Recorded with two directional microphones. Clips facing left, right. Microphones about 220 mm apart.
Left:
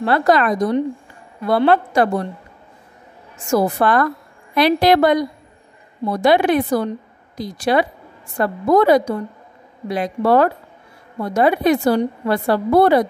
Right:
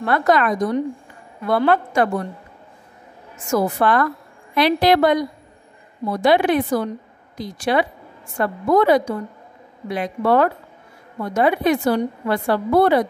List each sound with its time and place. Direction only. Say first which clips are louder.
0.0 s a woman's voice: left 2 dB; 30° left (ahead or behind)
3.4 s a woman's voice: left 2 dB; 35° left (ahead or behind)